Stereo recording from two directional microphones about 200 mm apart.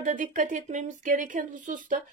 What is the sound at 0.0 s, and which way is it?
Speech, 40° right (ahead or behind).